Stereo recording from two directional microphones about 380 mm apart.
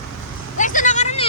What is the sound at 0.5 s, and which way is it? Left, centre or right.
Vehicle, centre.